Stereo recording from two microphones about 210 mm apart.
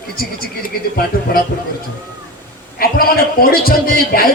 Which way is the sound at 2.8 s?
45° left (ahead or behind).